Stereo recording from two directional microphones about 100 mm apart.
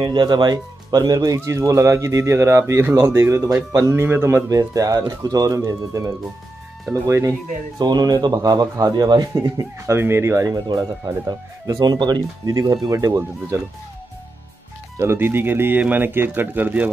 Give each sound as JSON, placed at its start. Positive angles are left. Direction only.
{"t": 0.0, "sound": "speech", "side_deg": -50}
{"t": 4.5, "sound": "speech", "side_deg": -35}
{"t": 7.8, "sound": "speech", "side_deg": -45}
{"t": 9.9, "sound": "speech", "side_deg": -25}
{"t": 10.4, "sound": "speech", "side_deg": -40}
{"t": 15.0, "sound": "speech", "side_deg": -25}